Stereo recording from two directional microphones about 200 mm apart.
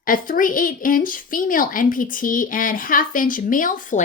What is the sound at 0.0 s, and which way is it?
A woman's voice, 45° left (ahead or behind).